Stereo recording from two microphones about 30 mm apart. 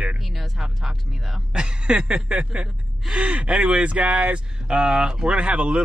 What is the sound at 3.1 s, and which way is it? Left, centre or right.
Speech, right.